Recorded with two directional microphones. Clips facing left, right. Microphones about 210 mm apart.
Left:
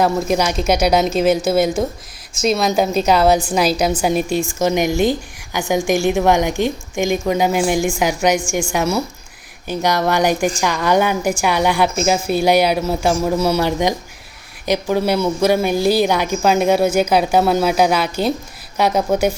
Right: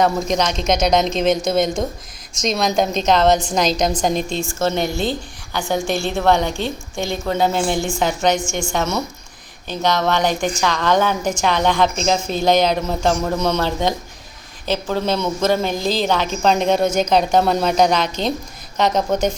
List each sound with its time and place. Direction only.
0.0 s speech: 5° left (ahead or behind)